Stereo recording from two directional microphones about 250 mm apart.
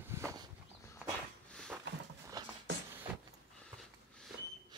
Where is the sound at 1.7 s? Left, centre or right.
Centre.